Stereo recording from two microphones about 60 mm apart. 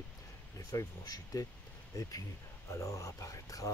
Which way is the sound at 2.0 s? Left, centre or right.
Left.